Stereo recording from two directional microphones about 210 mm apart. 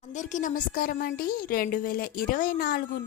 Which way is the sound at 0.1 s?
35° left (ahead or behind).